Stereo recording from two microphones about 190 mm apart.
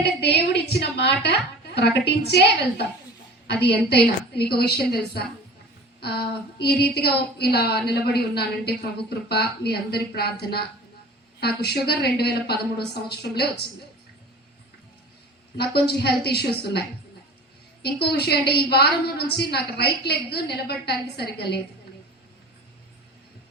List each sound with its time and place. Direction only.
0.0 s a woman's voice: 60° left (ahead or behind)
15.5 s a woman's voice: 55° left (ahead or behind)
17.8 s a woman's voice: 60° left (ahead or behind)